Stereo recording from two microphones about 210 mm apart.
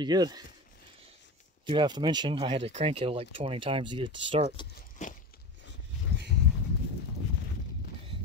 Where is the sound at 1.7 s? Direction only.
20° right (ahead or behind).